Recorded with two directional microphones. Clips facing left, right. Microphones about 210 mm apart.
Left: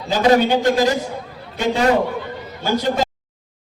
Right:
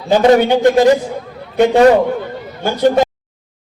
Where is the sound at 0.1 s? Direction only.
60° right (ahead or behind).